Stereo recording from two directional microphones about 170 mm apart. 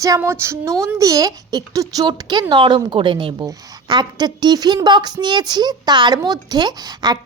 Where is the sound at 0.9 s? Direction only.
20° right (ahead or behind).